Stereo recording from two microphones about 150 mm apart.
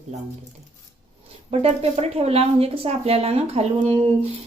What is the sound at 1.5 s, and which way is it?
A woman's voice, 45° right (ahead or behind).